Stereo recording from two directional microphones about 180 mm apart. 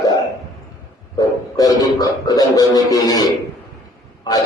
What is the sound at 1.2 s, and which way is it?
A man's voice, 20° left (ahead or behind).